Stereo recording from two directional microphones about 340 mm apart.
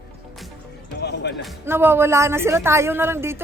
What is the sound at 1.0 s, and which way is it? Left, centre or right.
Music, left.